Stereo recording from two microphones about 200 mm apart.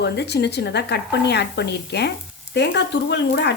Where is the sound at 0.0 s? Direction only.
55° left (ahead or behind).